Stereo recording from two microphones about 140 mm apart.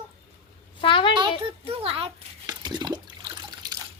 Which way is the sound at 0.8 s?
40° left (ahead or behind).